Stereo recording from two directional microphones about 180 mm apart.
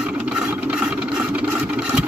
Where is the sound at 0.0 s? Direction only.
5° right (ahead or behind).